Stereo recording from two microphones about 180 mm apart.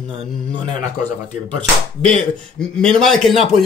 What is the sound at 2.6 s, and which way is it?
A man's voice, 5° left (ahead or behind).